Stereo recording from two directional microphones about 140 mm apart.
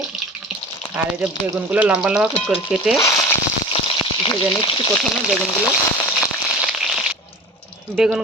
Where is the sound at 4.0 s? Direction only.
30° left (ahead or behind).